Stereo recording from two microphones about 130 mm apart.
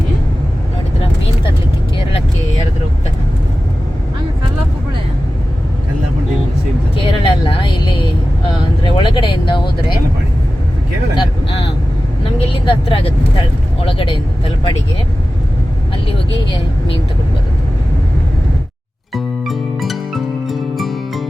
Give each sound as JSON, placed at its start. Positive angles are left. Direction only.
{"t": 6.9, "sound": "vehicle", "side_deg": 45}
{"t": 9.0, "sound": "a sound", "side_deg": 40}
{"t": 12.6, "sound": "vehicle", "side_deg": 40}
{"t": 19.1, "sound": "music", "side_deg": 0}